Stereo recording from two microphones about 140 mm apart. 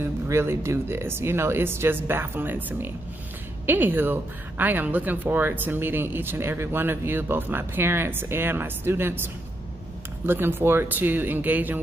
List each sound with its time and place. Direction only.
0.0 s a woman's voice: 15° right (ahead or behind)